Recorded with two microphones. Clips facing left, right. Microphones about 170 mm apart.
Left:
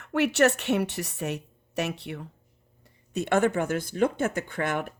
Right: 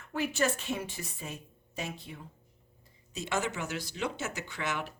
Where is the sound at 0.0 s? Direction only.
75° left (ahead or behind).